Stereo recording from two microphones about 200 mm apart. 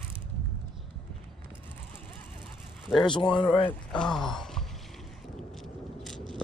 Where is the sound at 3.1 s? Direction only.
25° left (ahead or behind).